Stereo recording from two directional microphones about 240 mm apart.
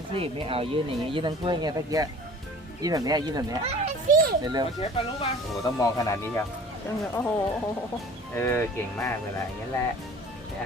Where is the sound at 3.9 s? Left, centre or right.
Right.